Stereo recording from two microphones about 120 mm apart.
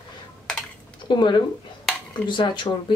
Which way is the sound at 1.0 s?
40° left (ahead or behind).